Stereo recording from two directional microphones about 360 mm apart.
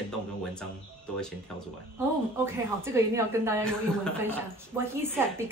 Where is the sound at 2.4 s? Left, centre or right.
Centre.